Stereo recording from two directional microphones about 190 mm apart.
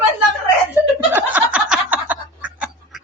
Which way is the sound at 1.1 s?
10° right (ahead or behind).